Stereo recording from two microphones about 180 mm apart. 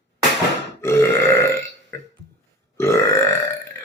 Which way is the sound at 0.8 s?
15° left (ahead or behind).